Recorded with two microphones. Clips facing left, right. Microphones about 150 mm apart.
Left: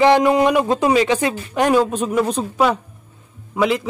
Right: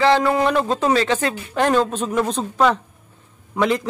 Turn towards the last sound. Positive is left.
turn(degrees=5)  # may be behind; listen again after turning